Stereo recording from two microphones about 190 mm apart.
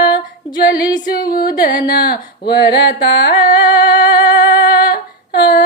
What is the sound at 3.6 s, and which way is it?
Humming, 20° left (ahead or behind).